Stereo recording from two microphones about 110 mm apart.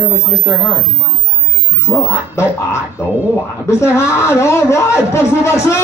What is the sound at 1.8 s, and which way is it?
Speech, 25° left (ahead or behind).